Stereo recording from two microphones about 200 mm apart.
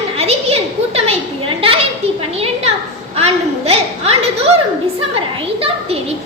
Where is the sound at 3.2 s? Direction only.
30° right (ahead or behind).